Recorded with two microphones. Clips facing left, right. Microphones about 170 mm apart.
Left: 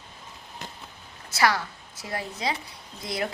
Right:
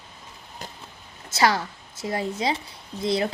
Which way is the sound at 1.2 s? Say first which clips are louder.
Right 2 dB; 25° right (ahead or behind).